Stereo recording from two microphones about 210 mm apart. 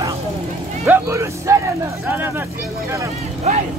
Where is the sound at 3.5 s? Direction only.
35° right (ahead or behind).